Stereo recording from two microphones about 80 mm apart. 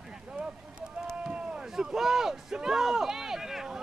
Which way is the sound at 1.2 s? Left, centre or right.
Centre.